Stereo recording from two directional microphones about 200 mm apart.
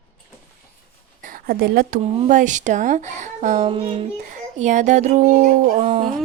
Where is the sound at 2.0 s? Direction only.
35° right (ahead or behind).